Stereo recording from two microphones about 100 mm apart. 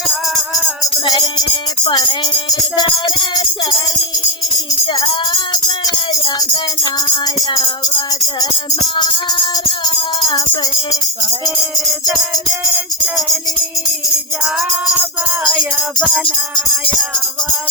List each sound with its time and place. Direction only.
0.1 s music: centre (ahead or behind)
1.0 s music: 45° left (ahead or behind)
9.0 s music: 55° left (ahead or behind)
10.6 s music: 40° left (ahead or behind)
12.1 s music: centre (ahead or behind)
15.4 s music: centre (ahead or behind)
16.2 s music: 60° left (ahead or behind)